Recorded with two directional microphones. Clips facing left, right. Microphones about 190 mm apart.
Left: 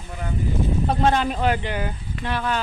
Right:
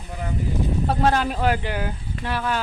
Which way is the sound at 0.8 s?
5° right (ahead or behind).